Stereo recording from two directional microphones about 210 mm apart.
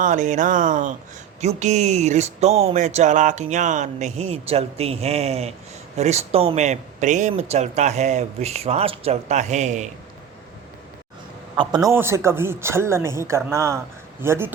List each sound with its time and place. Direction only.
0.0 s speech: 35° right (ahead or behind)
11.5 s speech: 20° right (ahead or behind)